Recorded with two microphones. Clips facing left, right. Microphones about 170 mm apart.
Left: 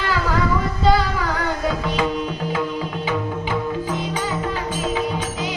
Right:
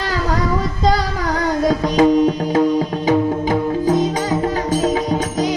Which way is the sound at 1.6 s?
40° right (ahead or behind).